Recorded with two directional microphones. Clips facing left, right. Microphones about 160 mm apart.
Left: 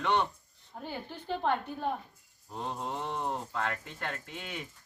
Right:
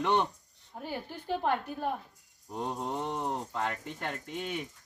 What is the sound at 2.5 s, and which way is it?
Speech, 15° right (ahead or behind).